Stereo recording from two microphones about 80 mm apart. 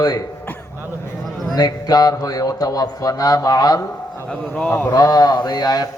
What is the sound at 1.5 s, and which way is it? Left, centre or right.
A man's voice, left.